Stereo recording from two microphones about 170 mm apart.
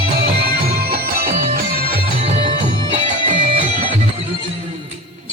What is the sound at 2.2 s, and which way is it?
Music, 35° right (ahead or behind).